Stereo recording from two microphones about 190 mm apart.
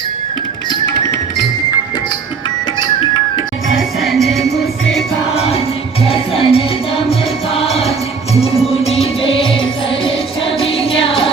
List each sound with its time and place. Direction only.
3.8 s music: centre (ahead or behind)
5.3 s music: 30° left (ahead or behind)